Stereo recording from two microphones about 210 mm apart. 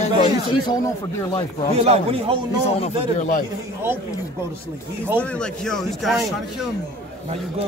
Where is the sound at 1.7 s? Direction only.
30° right (ahead or behind).